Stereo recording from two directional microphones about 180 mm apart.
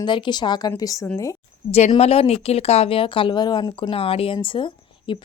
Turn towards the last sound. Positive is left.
turn(degrees=25)  # may be behind; listen again after turning